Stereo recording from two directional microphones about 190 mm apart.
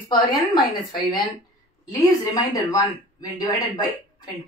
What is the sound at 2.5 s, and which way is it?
A woman's voice, 20° left (ahead or behind).